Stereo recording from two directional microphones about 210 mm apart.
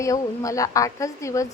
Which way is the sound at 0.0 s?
15° left (ahead or behind).